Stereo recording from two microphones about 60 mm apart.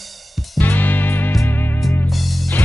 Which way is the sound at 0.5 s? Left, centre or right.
Left.